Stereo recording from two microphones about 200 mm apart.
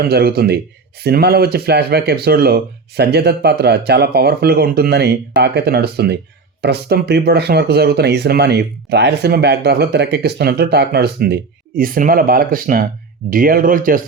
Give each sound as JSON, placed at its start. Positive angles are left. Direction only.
{"t": 0.0, "sound": "speech", "side_deg": -50}